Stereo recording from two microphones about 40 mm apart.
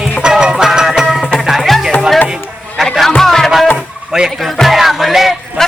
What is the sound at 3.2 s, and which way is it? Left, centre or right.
Music, centre.